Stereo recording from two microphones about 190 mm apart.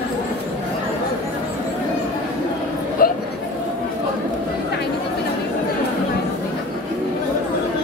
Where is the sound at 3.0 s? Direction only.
50° left (ahead or behind).